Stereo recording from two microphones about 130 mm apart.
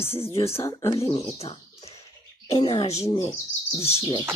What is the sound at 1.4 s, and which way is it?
Bird, 50° left (ahead or behind).